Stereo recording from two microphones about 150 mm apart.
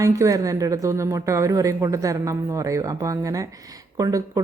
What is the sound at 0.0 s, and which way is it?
Speech, 20° right (ahead or behind).